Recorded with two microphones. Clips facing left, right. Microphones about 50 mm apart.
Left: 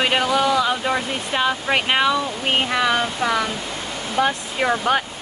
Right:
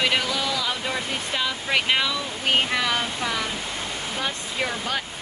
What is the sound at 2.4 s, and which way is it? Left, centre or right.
Speech, centre.